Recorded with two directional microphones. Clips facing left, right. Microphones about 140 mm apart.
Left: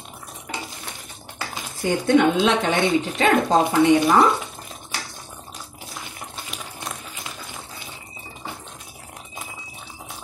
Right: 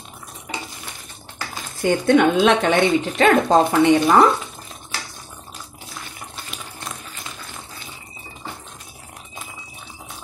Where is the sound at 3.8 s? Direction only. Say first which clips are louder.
Even; 50° right (ahead or behind).